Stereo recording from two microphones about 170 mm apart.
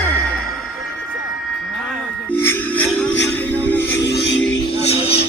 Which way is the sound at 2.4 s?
10° left (ahead or behind).